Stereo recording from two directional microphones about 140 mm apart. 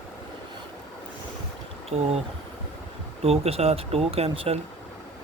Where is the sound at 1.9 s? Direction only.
55° right (ahead or behind).